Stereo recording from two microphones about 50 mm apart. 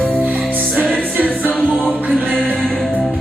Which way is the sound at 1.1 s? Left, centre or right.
Right.